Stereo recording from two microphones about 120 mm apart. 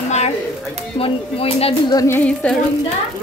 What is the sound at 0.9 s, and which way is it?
Speech, 55° left (ahead or behind).